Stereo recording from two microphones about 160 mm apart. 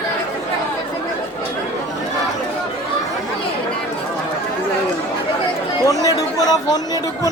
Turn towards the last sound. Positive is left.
turn(degrees=25)  # may be behind; listen again after turning